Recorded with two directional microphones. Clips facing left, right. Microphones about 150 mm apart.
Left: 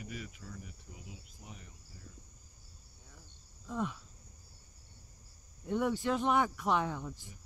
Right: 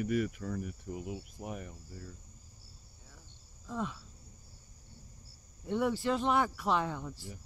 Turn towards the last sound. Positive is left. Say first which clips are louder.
# even
turn(degrees=0)  # may be behind; listen again after turning